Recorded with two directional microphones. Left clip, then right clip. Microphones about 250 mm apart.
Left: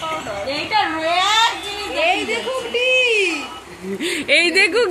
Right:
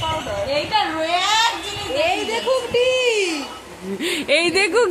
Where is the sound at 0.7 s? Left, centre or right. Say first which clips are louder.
Left 4 dB; centre.